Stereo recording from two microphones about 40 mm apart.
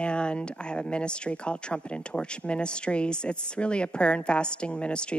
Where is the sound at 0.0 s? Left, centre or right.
Left.